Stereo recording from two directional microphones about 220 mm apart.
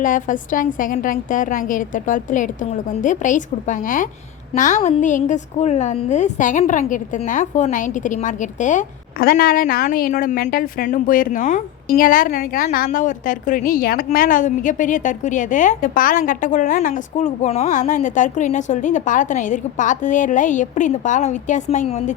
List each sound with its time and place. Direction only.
0.0 s a woman's voice: 35° left (ahead or behind)